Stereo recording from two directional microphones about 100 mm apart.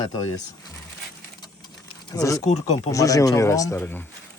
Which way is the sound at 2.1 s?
35° left (ahead or behind).